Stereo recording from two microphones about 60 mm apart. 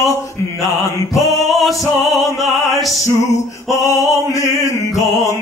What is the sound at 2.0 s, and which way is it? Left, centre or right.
Opera, centre.